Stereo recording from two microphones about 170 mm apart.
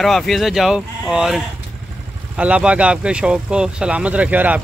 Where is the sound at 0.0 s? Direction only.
Centre (ahead or behind).